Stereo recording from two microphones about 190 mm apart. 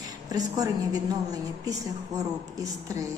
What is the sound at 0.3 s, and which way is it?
A woman's voice, 20° right (ahead or behind).